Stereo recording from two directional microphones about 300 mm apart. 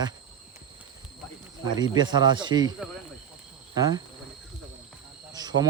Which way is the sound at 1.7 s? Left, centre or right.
Centre.